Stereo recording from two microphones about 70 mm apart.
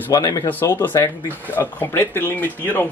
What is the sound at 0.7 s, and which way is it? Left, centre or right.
Speech, left.